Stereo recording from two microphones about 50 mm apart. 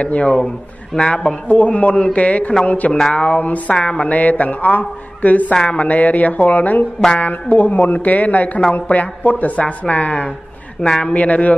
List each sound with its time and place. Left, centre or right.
0.0 s a man's voice: left
1.5 s speech: left
10.8 s a man's voice: centre
11.1 s speech: left